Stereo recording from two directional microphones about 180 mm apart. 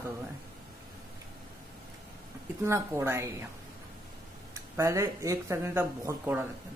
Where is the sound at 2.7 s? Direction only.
15° right (ahead or behind).